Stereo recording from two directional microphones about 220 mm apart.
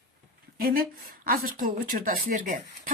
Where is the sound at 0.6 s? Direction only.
40° right (ahead or behind).